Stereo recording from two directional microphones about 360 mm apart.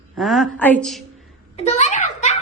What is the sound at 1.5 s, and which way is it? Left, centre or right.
Speech, centre.